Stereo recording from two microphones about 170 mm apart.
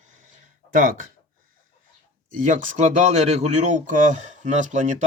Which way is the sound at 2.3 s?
50° right (ahead or behind).